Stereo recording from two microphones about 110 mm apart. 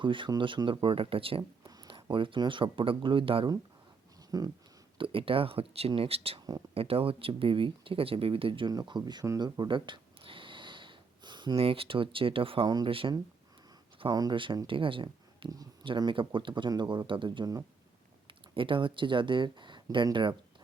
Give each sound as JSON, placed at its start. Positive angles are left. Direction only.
{"t": 0.0, "sound": "speech", "side_deg": -50}
{"t": 1.6, "sound": "a sound", "side_deg": -35}
{"t": 1.9, "sound": "speech", "side_deg": -50}
{"t": 4.3, "sound": "speech", "side_deg": -35}
{"t": 4.9, "sound": "speech", "side_deg": -55}
{"t": 8.7, "sound": "speech", "side_deg": -40}
{"t": 9.4, "sound": "a sound", "side_deg": -45}
{"t": 11.5, "sound": "speech", "side_deg": -60}
{"t": 12.6, "sound": "speech", "side_deg": -40}
{"t": 12.9, "sound": "speech", "side_deg": -55}
{"t": 14.1, "sound": "speech", "side_deg": -40}
{"t": 18.3, "sound": "speech", "side_deg": -50}